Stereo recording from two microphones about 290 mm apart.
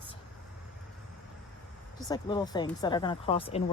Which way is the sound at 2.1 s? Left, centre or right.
Centre.